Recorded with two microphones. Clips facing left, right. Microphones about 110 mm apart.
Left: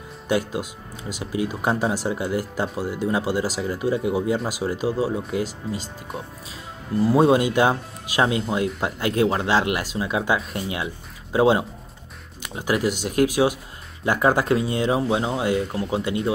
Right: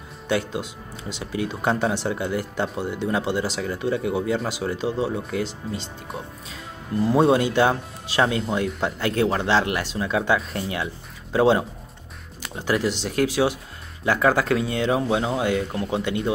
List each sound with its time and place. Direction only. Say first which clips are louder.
0.3 s speech: left 1 dB; 10° left (ahead or behind)
16.1 s speech: left 1 dB; centre (ahead or behind)